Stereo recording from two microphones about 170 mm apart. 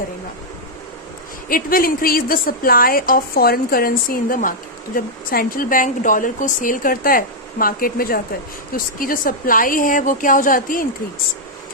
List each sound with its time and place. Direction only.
1.5 s a woman's voice: 55° left (ahead or behind)